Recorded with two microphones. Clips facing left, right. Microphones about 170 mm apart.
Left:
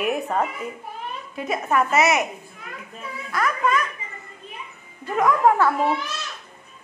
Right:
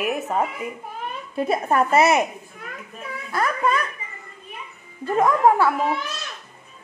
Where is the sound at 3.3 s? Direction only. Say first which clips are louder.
Right 1 dB; 30° right (ahead or behind).